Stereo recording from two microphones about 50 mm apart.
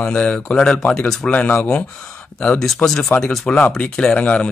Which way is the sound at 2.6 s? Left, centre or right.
Centre.